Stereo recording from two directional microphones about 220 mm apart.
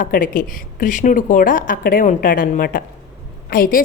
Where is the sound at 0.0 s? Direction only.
40° left (ahead or behind).